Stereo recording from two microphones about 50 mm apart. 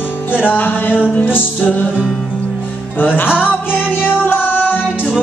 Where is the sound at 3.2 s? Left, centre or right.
Left.